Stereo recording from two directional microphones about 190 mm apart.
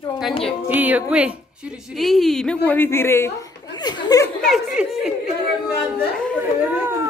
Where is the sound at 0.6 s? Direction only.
10° right (ahead or behind); by 4.2 s 20° left (ahead or behind).